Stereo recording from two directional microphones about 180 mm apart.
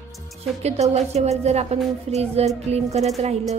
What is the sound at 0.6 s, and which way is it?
Speech, 35° right (ahead or behind).